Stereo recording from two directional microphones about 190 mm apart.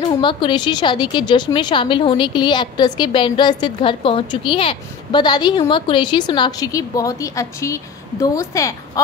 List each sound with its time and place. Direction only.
0.2 s a woman's voice: 25° left (ahead or behind)